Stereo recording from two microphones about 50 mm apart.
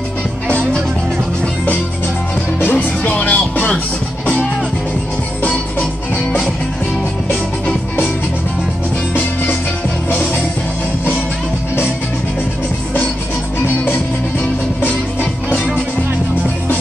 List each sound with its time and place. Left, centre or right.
2.6 s music: left
3.1 s music: left
9.1 s music: left